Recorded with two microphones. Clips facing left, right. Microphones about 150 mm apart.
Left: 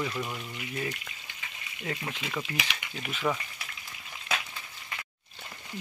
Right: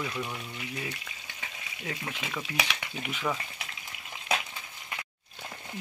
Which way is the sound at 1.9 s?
Centre (ahead or behind).